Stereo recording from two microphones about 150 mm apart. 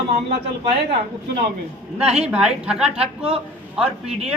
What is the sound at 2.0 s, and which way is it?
Speech, 45° right (ahead or behind).